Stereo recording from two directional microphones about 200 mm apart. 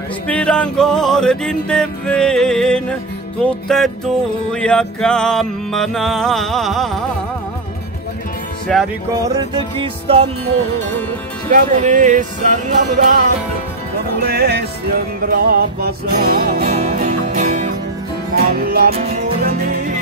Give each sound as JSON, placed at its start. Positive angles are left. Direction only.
{"t": 0.3, "sound": "music", "side_deg": 5}
{"t": 8.7, "sound": "music", "side_deg": 0}
{"t": 9.1, "sound": "music", "side_deg": -20}
{"t": 11.5, "sound": "music", "side_deg": -40}
{"t": 14.2, "sound": "music", "side_deg": -50}
{"t": 18.3, "sound": "music", "side_deg": -50}
{"t": 18.9, "sound": "music", "side_deg": -35}
{"t": 19.2, "sound": "music", "side_deg": -50}